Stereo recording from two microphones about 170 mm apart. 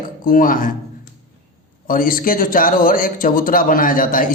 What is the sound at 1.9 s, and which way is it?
Speech, 55° left (ahead or behind).